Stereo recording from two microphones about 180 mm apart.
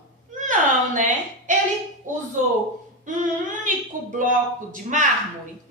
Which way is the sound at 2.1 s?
45° right (ahead or behind).